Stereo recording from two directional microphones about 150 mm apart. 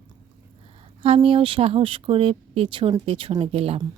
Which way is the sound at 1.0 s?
40° right (ahead or behind).